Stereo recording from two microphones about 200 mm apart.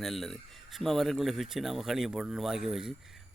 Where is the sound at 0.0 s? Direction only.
Centre (ahead or behind).